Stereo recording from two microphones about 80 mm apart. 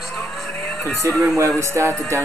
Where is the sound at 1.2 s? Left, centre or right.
Right.